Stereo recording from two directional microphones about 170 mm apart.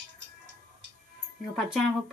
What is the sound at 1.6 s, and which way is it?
Speech, centre (ahead or behind).